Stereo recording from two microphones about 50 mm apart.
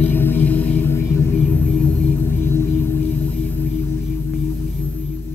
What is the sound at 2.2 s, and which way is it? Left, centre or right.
Music, left.